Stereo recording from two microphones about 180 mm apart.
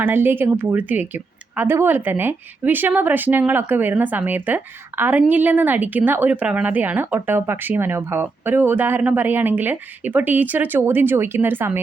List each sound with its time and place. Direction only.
0.0 s speech: 10° right (ahead or behind)